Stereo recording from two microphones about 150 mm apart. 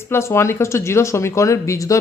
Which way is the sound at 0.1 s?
20° left (ahead or behind).